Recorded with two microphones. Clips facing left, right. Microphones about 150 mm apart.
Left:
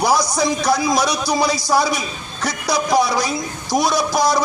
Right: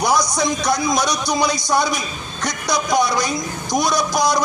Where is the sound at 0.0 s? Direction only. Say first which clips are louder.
Left 1 dB; 30° left (ahead or behind).